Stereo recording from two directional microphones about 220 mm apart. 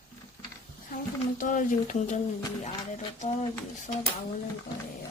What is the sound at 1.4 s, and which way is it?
A woman's voice, 35° left (ahead or behind).